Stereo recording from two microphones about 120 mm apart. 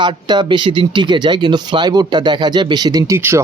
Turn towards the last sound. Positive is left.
turn(degrees=-25)  # may be behind; listen again after turning